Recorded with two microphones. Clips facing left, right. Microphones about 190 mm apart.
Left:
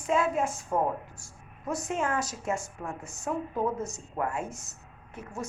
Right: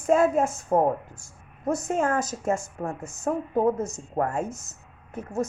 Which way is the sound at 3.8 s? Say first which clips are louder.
Right 5 dB; 20° right (ahead or behind).